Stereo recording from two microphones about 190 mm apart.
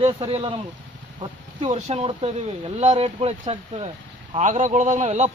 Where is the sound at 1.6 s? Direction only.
40° right (ahead or behind).